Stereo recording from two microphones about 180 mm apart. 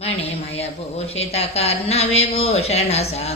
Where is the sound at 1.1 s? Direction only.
35° left (ahead or behind).